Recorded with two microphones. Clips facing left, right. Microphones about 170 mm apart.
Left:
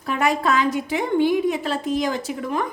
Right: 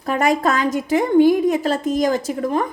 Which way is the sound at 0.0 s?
45° right (ahead or behind).